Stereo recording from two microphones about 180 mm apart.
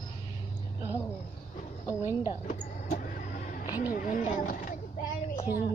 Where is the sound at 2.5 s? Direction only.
50° left (ahead or behind).